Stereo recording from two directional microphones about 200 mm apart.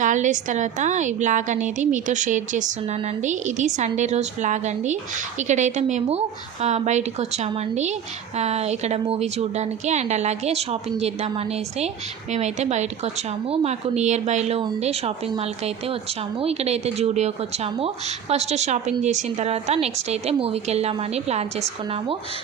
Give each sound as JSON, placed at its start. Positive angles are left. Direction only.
{"t": 0.0, "sound": "a woman's voice", "side_deg": -40}